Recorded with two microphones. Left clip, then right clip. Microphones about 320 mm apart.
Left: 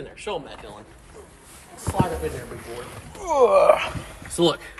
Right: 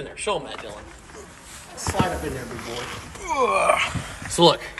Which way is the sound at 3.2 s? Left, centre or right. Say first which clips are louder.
Left 4 dB; centre.